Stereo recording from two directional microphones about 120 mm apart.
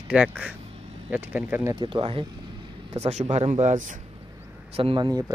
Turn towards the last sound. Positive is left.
turn(degrees=-35)  # may be behind; listen again after turning